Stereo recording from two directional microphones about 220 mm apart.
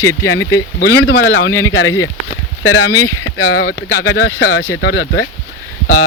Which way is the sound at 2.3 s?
70° left (ahead or behind).